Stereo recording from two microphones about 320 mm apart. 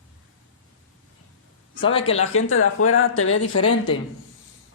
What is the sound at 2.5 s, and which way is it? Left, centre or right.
Speech, left.